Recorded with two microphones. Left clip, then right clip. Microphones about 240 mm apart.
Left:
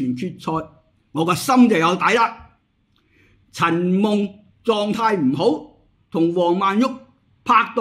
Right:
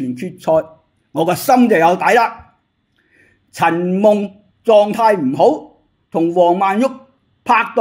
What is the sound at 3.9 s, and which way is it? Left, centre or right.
A woman's voice, centre.